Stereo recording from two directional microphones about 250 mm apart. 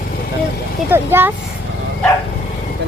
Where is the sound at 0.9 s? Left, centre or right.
Centre.